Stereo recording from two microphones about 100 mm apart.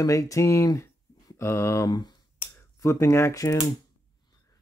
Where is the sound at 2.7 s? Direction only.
30° left (ahead or behind).